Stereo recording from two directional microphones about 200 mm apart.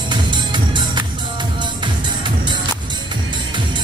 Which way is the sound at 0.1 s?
20° right (ahead or behind).